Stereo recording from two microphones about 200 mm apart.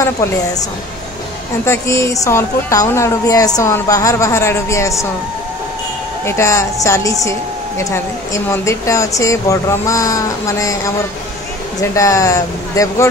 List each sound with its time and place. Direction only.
1.7 s speech: 15° left (ahead or behind)
6.2 s speech: 15° left (ahead or behind)
11.8 s speech: 15° left (ahead or behind)